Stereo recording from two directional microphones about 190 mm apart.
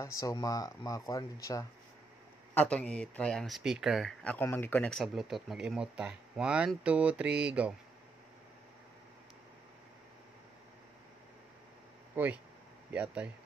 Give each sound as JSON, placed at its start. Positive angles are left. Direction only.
{"t": 0.0, "sound": "speech", "side_deg": 15}
{"t": 2.5, "sound": "speech", "side_deg": 5}
{"t": 12.2, "sound": "speech", "side_deg": -10}